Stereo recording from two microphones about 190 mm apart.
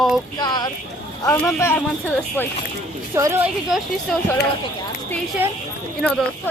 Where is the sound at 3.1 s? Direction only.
15° right (ahead or behind).